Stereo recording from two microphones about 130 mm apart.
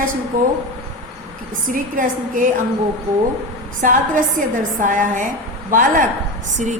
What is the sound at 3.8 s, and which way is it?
A woman's voice, 90° right.